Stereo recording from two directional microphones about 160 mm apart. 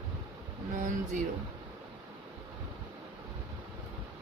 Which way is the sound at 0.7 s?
50° right (ahead or behind).